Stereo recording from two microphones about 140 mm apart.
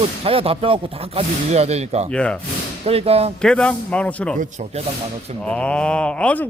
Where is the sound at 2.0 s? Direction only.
10° left (ahead or behind).